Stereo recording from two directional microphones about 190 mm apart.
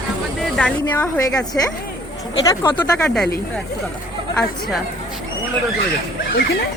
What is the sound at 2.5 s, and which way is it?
Speech, 10° left (ahead or behind).